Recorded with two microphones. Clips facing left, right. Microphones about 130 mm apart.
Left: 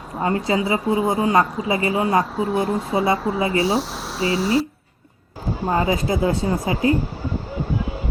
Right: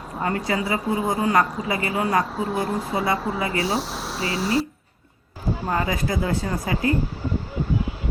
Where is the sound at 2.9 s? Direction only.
25° left (ahead or behind).